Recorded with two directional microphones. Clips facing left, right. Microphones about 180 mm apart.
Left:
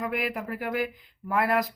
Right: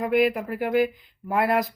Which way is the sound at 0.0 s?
30° right (ahead or behind).